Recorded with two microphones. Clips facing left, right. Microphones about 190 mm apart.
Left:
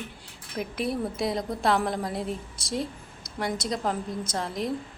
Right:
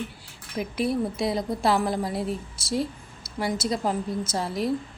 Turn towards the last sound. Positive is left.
turn(degrees=-5)  # may be behind; listen again after turning